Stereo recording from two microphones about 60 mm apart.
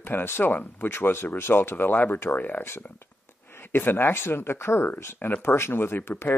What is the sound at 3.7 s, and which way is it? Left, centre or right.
Speech, left.